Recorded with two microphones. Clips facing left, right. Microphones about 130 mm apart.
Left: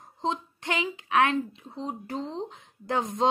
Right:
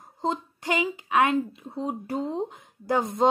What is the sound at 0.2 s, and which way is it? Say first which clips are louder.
Speech: right 2 dB; 5° right (ahead or behind).